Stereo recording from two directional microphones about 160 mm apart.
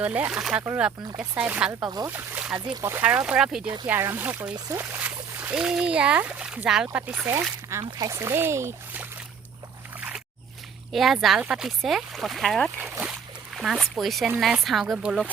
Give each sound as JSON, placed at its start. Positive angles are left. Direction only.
{"t": 0.0, "sound": "speech", "side_deg": -10}
{"t": 7.9, "sound": "speech", "side_deg": -20}
{"t": 10.9, "sound": "speech", "side_deg": 0}
{"t": 13.0, "sound": "a sound", "side_deg": -5}
{"t": 14.3, "sound": "speech", "side_deg": -10}